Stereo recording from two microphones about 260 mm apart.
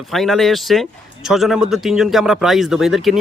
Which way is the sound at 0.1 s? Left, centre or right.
Centre.